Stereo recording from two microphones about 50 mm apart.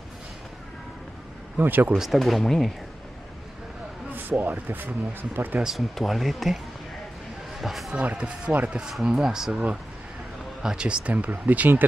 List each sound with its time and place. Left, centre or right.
1.6 s speech: right
2.0 s speech: centre
4.1 s speech: right
5.8 s speech: centre
7.6 s speech: centre
7.9 s speech: right
10.6 s speech: centre; by 11.8 s right